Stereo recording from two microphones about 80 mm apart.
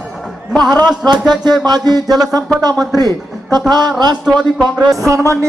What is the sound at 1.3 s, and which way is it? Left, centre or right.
Speech, right.